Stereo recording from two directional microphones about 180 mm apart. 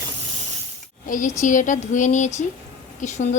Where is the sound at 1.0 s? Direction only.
45° left (ahead or behind).